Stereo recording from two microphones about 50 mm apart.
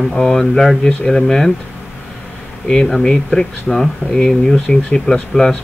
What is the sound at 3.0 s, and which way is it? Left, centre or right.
Speech, centre.